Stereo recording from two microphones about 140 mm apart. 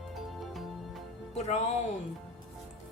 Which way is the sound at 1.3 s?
50° left (ahead or behind).